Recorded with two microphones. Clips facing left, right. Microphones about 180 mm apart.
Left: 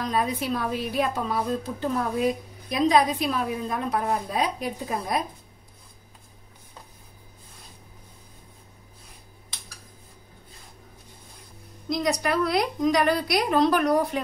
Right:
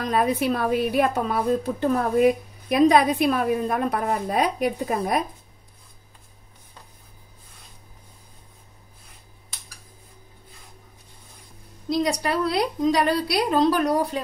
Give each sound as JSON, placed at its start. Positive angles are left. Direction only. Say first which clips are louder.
{"t": 0.0, "sound": "a woman's voice", "louder": "right 4 dB", "side_deg": -60}
{"t": 11.9, "sound": "a woman's voice", "louder": "right 2 dB", "side_deg": -30}